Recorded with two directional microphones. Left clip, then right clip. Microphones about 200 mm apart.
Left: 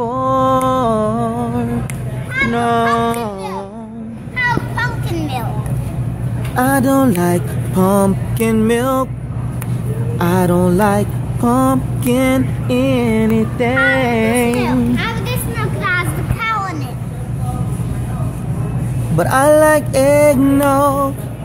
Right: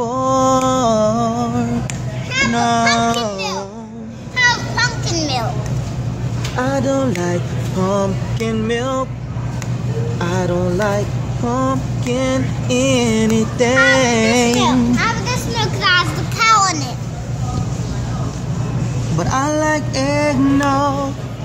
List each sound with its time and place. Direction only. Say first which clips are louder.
0.0 s music: left 1 dB; 5° left (ahead or behind)
2.5 s children playing: left 1 dB; 5° left (ahead or behind)
4.7 s children playing: right 2 dB; 15° right (ahead or behind)
6.5 s a sound: left 4 dB; 40° left (ahead or behind)
7.8 s music: left 4 dB; 40° left (ahead or behind)
10.1 s vehicle: left 5 dB; 40° left (ahead or behind)
12.6 s music: right 1 dB; 20° left (ahead or behind); by 14.5 s centre (ahead or behind)
14.6 s a child's voice: right 2 dB; 45° left (ahead or behind)
15.8 s children playing: right 3 dB; 30° right (ahead or behind)
19.1 s music: left 8 dB; 40° left (ahead or behind)